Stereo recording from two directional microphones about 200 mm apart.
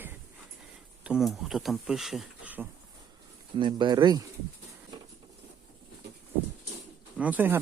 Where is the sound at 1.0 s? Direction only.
Centre (ahead or behind).